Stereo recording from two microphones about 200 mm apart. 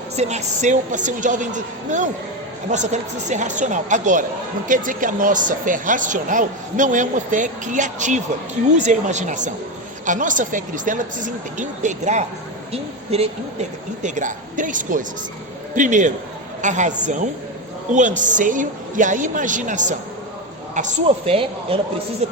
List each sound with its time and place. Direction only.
0.2 s speech: 35° right (ahead or behind)